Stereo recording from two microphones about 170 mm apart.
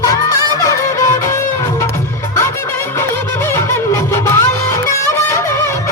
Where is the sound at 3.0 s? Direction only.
15° left (ahead or behind).